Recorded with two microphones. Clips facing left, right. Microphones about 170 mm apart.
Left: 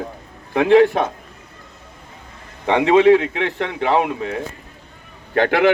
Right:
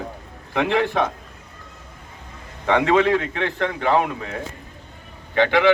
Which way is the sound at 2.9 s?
25° left (ahead or behind).